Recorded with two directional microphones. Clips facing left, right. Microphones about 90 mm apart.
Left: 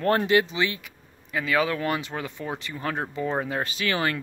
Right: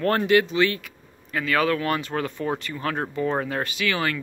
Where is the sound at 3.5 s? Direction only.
30° left (ahead or behind).